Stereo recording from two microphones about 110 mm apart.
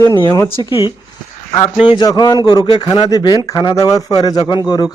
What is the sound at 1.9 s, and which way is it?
Speech, 40° left (ahead or behind).